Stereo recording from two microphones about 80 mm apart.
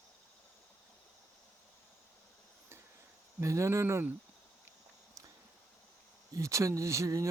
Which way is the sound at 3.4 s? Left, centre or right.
Right.